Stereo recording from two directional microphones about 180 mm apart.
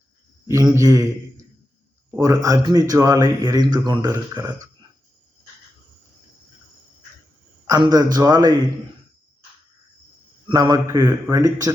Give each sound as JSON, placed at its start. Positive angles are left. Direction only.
{"t": 0.4, "sound": "a man's voice", "side_deg": -15}
{"t": 2.0, "sound": "speech", "side_deg": -15}
{"t": 7.7, "sound": "speech", "side_deg": -20}
{"t": 10.5, "sound": "speech", "side_deg": -20}